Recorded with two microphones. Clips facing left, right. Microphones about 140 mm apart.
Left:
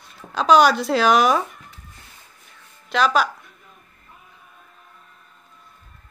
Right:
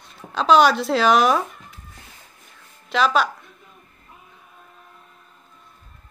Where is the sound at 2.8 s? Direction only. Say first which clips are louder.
Even; centre (ahead or behind).